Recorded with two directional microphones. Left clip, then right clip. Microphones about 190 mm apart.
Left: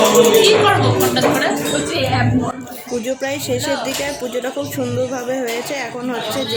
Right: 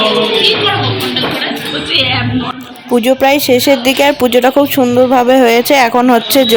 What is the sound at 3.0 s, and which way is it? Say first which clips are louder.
Speech: right 14 dB; 40° right (ahead or behind).